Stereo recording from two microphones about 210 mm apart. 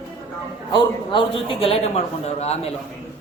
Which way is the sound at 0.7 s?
25° left (ahead or behind).